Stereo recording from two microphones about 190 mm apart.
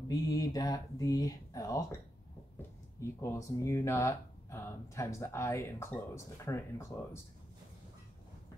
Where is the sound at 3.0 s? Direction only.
15° left (ahead or behind).